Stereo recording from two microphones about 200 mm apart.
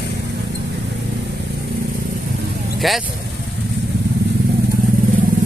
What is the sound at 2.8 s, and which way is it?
Speech, centre (ahead or behind).